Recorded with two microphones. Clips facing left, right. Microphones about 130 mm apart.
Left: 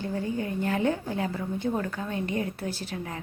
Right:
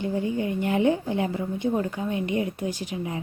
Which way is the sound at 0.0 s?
15° right (ahead or behind).